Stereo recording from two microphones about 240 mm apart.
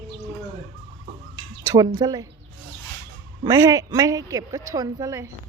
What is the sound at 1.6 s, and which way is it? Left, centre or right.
Speech, centre.